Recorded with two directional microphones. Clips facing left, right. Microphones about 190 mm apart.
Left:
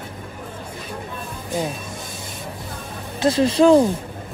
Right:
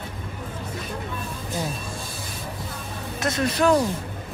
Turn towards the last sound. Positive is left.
turn(degrees=25)  # may be behind; listen again after turning